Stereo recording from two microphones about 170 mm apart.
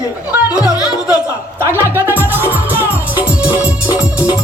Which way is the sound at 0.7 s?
25° left (ahead or behind).